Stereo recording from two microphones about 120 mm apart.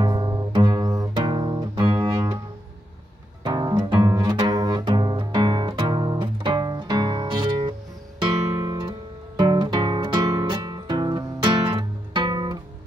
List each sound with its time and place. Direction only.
0.0 s music: 35° right (ahead or behind)
3.4 s music: 35° right (ahead or behind)
9.4 s guitar: 35° right (ahead or behind)
10.3 s music: 30° right (ahead or behind)